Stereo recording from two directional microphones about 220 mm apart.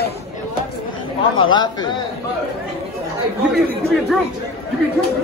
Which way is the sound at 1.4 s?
20° left (ahead or behind).